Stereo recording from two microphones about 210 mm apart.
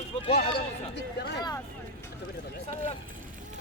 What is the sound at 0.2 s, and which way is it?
Speech, 30° left (ahead or behind).